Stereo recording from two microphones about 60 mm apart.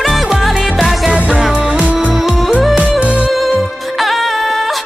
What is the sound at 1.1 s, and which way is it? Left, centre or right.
Music, centre.